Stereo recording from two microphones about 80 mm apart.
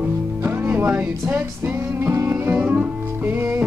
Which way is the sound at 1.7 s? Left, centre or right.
Right.